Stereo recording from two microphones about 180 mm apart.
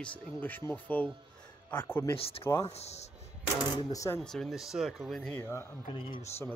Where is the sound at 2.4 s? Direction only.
15° left (ahead or behind).